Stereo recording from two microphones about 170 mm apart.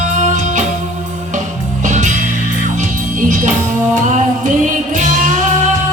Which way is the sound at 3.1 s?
50° right (ahead or behind).